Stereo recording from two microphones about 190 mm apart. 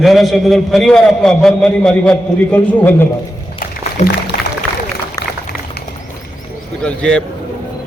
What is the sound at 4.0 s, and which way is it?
Speech, 35° left (ahead or behind).